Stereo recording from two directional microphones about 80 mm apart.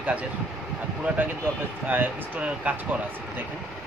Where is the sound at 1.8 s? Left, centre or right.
Right.